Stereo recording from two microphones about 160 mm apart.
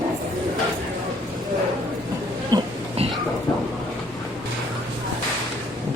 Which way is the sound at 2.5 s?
25° right (ahead or behind).